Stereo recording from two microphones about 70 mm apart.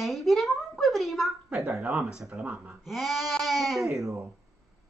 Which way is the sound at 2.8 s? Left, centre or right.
Centre.